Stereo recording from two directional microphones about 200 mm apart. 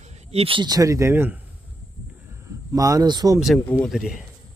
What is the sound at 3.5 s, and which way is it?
Speech, 10° left (ahead or behind).